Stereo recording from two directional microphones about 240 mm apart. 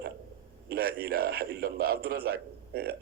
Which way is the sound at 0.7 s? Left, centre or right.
Right.